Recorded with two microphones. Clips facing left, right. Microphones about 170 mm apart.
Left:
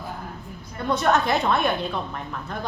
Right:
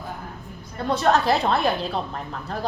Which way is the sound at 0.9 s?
30° right (ahead or behind).